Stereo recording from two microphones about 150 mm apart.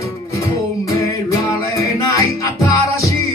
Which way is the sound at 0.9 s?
20° left (ahead or behind).